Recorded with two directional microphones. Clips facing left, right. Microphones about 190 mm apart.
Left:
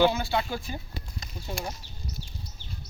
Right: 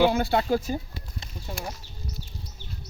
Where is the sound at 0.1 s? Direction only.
55° right (ahead or behind).